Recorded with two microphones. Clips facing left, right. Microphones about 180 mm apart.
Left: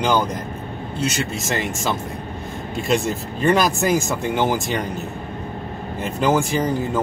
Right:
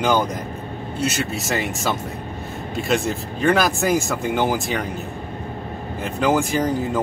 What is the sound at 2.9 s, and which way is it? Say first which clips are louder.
Speech: left 1 dB; centre (ahead or behind).